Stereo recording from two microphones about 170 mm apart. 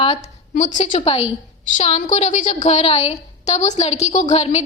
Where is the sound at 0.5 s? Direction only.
45° left (ahead or behind).